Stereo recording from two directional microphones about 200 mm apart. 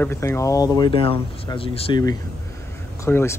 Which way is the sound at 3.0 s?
15° left (ahead or behind).